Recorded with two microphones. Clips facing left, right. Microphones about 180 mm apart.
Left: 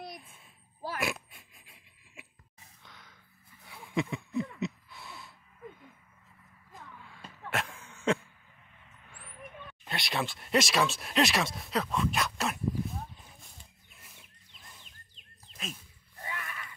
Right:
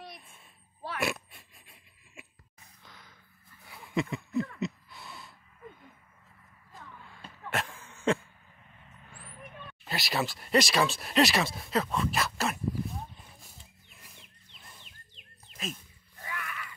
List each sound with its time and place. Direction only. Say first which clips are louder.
0.9 s pig: right 3 dB; centre (ahead or behind)
2.8 s gasp: right 1 dB; centre (ahead or behind)
3.6 s a sound: right 1 dB; centre (ahead or behind)
7.0 s throat clearing: even; centre (ahead or behind)
9.8 s speech: right 2 dB; 5° right (ahead or behind)
13.9 s wild animals: right 1 dB; centre (ahead or behind)
16.2 s a sound: right 1 dB; 25° left (ahead or behind)